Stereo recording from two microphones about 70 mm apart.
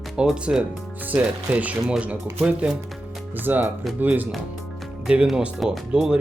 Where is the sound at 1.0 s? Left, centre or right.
Right.